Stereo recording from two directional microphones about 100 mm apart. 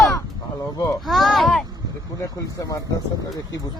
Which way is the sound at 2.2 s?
35° left (ahead or behind).